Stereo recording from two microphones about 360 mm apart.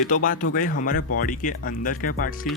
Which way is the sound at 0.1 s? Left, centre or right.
Left.